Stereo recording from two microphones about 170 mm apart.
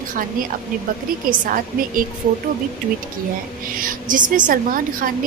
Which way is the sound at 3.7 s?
55° right (ahead or behind).